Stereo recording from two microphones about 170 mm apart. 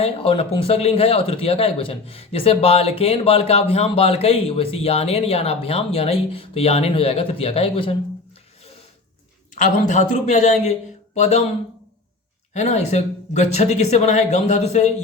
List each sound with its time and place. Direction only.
0.0 s speech: 35° left (ahead or behind)
9.6 s speech: 50° left (ahead or behind)
12.5 s speech: 40° left (ahead or behind)